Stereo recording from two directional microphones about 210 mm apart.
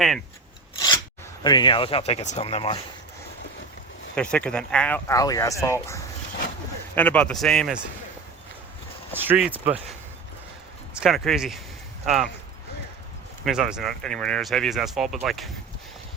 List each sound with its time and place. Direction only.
1.5 s speech: 20° left (ahead or behind)
4.1 s speech: 5° left (ahead or behind)
9.1 s speech: 10° right (ahead or behind)
10.9 s speech: centre (ahead or behind)
13.4 s speech: 5° right (ahead or behind)